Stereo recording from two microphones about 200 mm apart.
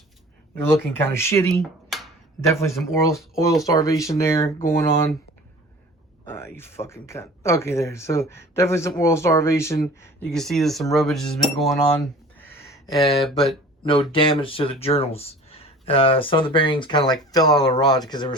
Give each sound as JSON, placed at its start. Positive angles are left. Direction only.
{"t": 0.6, "sound": "speech", "side_deg": 10}
{"t": 6.2, "sound": "speech", "side_deg": 10}
{"t": 12.5, "sound": "a sound", "side_deg": 15}
{"t": 13.2, "sound": "speech", "side_deg": 0}
{"t": 13.8, "sound": "speech", "side_deg": 25}